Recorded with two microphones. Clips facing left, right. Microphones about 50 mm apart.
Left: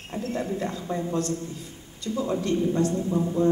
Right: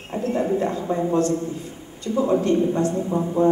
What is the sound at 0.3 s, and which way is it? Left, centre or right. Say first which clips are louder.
A woman's voice: right 8 dB; right.